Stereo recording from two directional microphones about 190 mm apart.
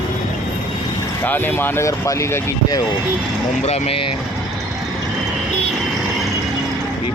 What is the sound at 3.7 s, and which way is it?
Speech, 30° left (ahead or behind).